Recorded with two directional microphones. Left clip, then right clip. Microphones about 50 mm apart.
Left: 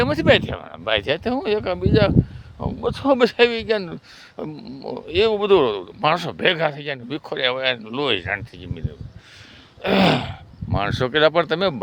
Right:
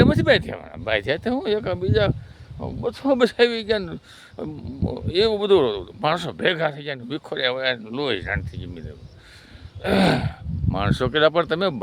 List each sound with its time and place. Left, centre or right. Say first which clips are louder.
0.0 s speech: left 1 dB; left
0.7 s speech: left 2 dB; centre; by 2.1 s left
2.6 s speech: left 3 dB; left
3.2 s speech: left 1 dB; left
3.5 s speech: left 1 dB; centre
6.3 s speech: left 2 dB; left
8.4 s speech: left 1 dB; centre
9.8 s speech: left 2 dB; left
10.7 s speech: left 1 dB; centre